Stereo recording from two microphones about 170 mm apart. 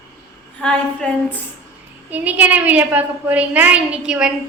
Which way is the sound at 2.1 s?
10° right (ahead or behind).